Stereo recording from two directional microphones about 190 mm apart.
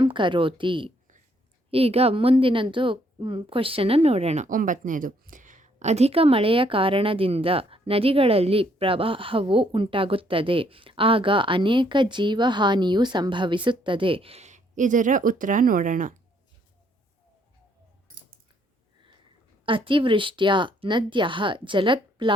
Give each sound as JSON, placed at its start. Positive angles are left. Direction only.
{"t": 0.0, "sound": "a woman's voice", "side_deg": -25}
{"t": 19.6, "sound": "a woman's voice", "side_deg": -25}